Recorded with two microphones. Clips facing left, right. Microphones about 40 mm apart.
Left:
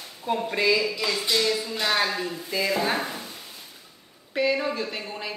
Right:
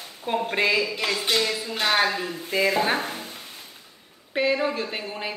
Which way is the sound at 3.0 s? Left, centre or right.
Right.